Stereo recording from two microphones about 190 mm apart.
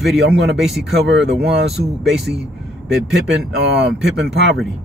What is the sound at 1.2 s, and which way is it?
Speech, 60° right (ahead or behind).